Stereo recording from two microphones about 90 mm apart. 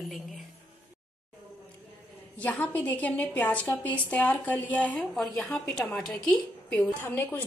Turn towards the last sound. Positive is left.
turn(degrees=25)  # may be behind; listen again after turning